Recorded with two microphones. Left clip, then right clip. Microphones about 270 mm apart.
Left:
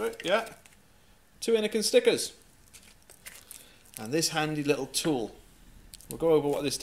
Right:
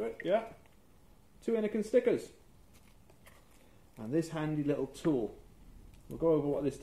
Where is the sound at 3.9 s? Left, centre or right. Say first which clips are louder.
Left 6 dB; centre.